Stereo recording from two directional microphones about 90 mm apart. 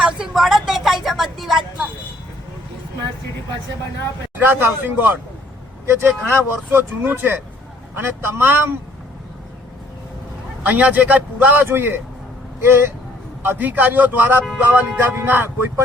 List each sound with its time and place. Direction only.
0.0 s vehicle: 5° right (ahead or behind)
4.4 s a man's voice: 25° right (ahead or behind)
10.6 s a man's voice: 15° right (ahead or behind)